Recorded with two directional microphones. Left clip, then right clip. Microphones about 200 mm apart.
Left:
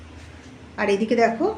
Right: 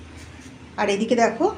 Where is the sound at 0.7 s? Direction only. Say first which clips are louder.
Even; 10° left (ahead or behind).